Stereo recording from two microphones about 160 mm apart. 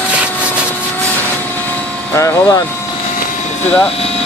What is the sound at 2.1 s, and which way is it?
Speech, 20° left (ahead or behind).